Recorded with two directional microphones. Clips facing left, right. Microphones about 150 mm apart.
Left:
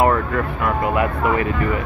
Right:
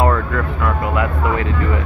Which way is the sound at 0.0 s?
15° left (ahead or behind).